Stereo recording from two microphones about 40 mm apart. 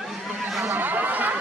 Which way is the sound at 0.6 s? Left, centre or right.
Right.